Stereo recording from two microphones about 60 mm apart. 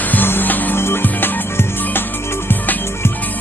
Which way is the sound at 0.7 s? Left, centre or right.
Left.